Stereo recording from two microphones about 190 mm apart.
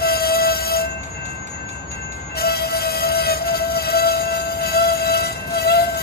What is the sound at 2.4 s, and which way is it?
Train, 55° left (ahead or behind).